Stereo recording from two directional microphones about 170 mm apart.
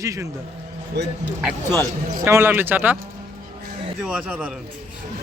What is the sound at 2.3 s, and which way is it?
Speech, 15° right (ahead or behind).